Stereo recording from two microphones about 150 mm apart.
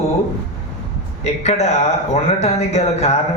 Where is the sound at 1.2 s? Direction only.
45° left (ahead or behind).